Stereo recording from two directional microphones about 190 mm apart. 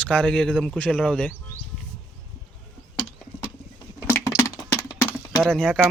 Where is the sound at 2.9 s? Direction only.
30° left (ahead or behind).